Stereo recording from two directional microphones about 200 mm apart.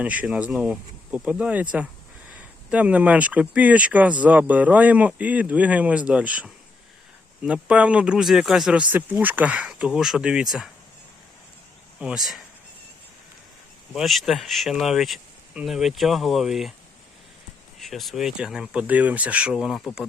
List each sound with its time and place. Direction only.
0.0 s speech: 5° right (ahead or behind)
2.6 s speech: 5° right (ahead or behind)
11.9 s speech: 5° right (ahead or behind)
13.9 s speech: centre (ahead or behind)
17.7 s speech: centre (ahead or behind)